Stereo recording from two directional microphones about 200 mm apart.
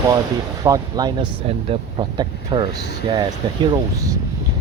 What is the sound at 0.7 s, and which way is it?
Speech, 20° right (ahead or behind).